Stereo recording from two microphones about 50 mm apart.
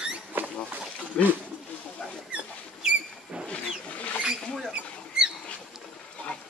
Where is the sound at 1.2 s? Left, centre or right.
Left.